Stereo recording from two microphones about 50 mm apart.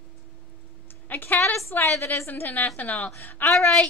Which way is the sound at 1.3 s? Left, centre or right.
Left.